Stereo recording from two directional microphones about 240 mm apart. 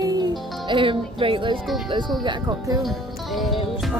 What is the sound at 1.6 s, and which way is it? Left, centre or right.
Speech, centre.